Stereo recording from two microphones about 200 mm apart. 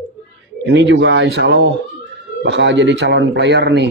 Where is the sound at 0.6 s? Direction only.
60° right (ahead or behind).